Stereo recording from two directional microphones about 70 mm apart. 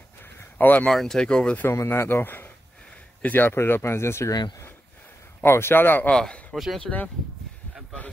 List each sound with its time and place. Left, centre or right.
0.2 s a sound: left
0.8 s speech: centre
1.9 s speech: left
4.3 s speech: left
5.4 s speech: left
6.0 s speech: centre
6.5 s speech: centre
6.8 s speech: left